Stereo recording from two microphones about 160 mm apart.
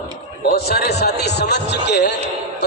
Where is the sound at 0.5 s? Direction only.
75° left (ahead or behind); by 2.1 s 90° left.